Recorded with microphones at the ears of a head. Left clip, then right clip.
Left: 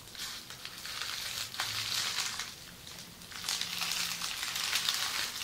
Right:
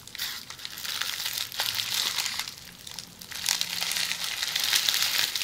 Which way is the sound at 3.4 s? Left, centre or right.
Right.